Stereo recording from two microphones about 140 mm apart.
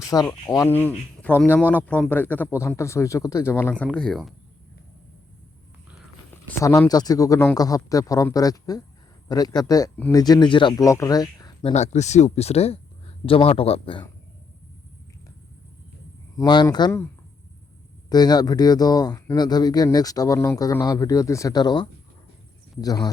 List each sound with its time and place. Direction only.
0.0 s speech: 25° left (ahead or behind)
0.7 s a man's voice: 15° left (ahead or behind)
3.8 s speech: 5° left (ahead or behind)
6.6 s speech: 20° left (ahead or behind)
10.8 s speech: 25° left (ahead or behind)
11.6 s a man's voice: 55° left (ahead or behind)
16.4 s a man's voice: 30° left (ahead or behind)
18.1 s speech: 30° left (ahead or behind)